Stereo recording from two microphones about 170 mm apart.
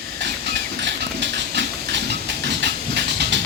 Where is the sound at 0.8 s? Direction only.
90° right.